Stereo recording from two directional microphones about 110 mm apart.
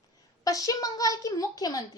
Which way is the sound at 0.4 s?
30° left (ahead or behind).